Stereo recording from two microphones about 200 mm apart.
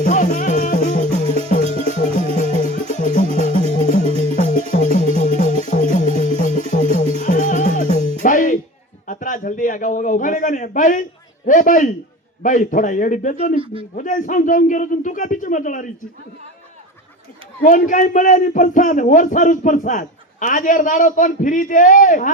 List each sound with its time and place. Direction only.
0.0 s music: 40° left (ahead or behind)
4.0 s music: 30° right (ahead or behind)
4.7 s music: 35° left (ahead or behind)
9.0 s a man's voice: 40° left (ahead or behind)
17.6 s a man's voice: 45° left (ahead or behind)